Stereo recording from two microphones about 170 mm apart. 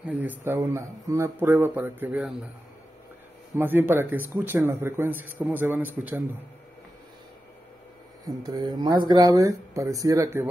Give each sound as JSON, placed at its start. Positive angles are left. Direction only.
{"t": 0.0, "sound": "speech", "side_deg": -10}
{"t": 3.5, "sound": "speech", "side_deg": -10}
{"t": 8.3, "sound": "speech", "side_deg": -20}